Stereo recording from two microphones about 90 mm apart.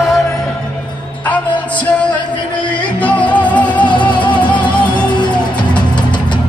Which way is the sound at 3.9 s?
65° left (ahead or behind).